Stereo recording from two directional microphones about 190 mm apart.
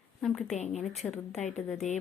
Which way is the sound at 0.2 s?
Centre (ahead or behind).